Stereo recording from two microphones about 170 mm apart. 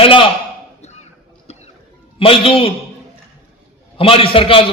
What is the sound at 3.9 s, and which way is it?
Speech, 30° left (ahead or behind).